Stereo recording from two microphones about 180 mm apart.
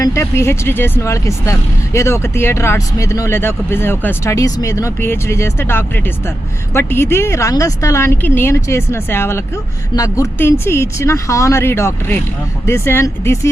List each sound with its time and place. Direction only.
0.0 s speech: 15° left (ahead or behind)